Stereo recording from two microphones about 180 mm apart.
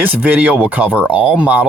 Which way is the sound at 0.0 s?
10° right (ahead or behind).